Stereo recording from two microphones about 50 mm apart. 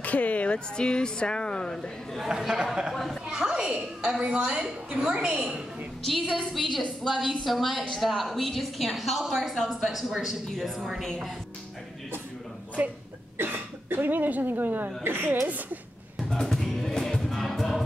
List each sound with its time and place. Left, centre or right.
0.0 s speech: left
2.1 s a woman's voice: centre
6.5 s a woman's voice: centre
12.8 s speech: right
13.4 s a woman's voice: right
15.4 s a woman's voice: right
16.2 s a sound: centre
16.6 s music: centre